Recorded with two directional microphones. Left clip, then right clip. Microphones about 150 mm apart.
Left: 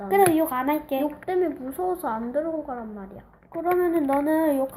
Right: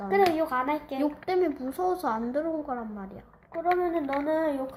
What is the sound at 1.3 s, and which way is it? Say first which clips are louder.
A woman's voice: left 1 dB; 20° right (ahead or behind).